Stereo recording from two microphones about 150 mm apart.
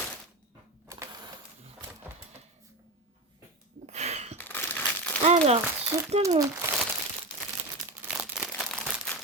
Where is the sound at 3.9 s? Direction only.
45° right (ahead or behind).